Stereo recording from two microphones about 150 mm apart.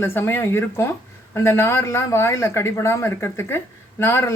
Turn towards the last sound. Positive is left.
turn(degrees=15)  # may be behind; listen again after turning